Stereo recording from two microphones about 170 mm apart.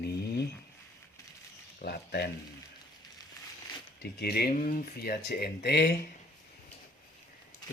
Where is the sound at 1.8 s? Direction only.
70° left (ahead or behind).